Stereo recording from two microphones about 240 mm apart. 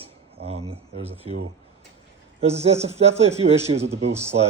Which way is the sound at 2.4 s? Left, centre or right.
Right.